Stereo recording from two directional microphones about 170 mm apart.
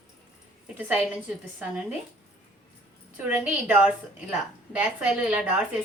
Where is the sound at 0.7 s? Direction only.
10° right (ahead or behind).